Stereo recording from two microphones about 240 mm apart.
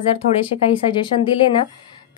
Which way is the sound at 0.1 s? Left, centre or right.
Left.